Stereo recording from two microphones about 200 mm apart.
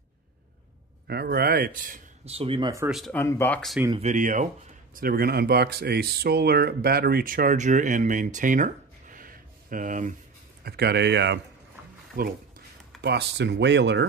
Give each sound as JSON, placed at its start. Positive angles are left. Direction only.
{"t": 1.0, "sound": "a man's voice", "side_deg": -50}
{"t": 2.3, "sound": "speech", "side_deg": -25}
{"t": 2.9, "sound": "speech", "side_deg": 5}
{"t": 3.9, "sound": "speech", "side_deg": -35}
{"t": 10.6, "sound": "speech", "side_deg": -55}
{"t": 12.2, "sound": "speech", "side_deg": -45}
{"t": 13.0, "sound": "speech", "side_deg": -60}